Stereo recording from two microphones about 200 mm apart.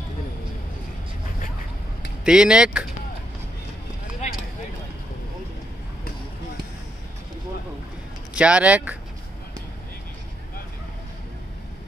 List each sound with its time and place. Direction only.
2.2 s speech: 5° right (ahead or behind)
4.2 s a sound: 35° left (ahead or behind)
8.4 s speech: 5° right (ahead or behind)